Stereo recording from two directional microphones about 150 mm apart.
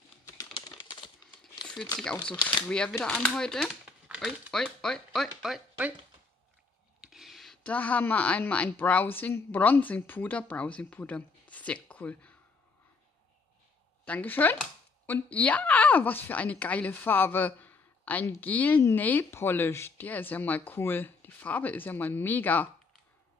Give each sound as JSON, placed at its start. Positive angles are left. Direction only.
{"t": 0.6, "sound": "typing", "side_deg": 30}
{"t": 2.6, "sound": "speech", "side_deg": 5}
{"t": 7.0, "sound": "speech", "side_deg": 0}
{"t": 14.0, "sound": "speech", "side_deg": 10}